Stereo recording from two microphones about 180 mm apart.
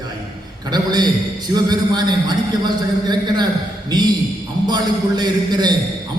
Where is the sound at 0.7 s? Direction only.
25° right (ahead or behind).